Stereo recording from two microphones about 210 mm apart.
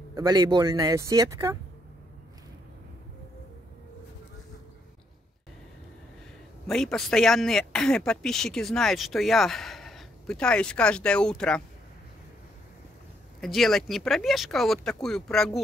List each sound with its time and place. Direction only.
0.1 s speech: 20° right (ahead or behind)
6.7 s speech: 5° left (ahead or behind)
13.4 s speech: centre (ahead or behind)